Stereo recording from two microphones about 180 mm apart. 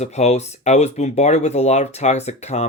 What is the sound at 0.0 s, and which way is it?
Speech, 35° left (ahead or behind).